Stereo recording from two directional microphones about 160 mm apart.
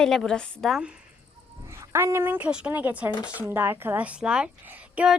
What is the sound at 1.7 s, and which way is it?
Speech, 15° right (ahead or behind).